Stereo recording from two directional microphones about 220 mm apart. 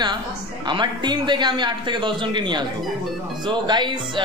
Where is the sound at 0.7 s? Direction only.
20° right (ahead or behind).